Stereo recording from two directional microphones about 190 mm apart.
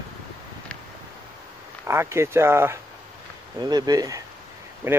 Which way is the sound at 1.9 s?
15° right (ahead or behind).